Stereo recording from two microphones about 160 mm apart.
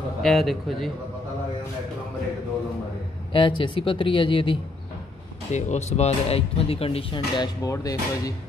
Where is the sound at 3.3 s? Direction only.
30° left (ahead or behind).